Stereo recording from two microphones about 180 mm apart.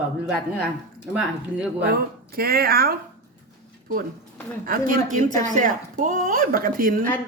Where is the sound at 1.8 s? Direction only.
60° right (ahead or behind).